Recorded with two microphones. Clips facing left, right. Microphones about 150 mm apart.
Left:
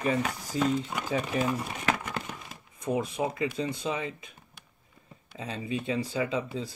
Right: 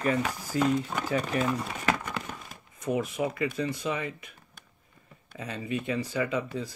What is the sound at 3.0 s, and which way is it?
Speech, 25° left (ahead or behind).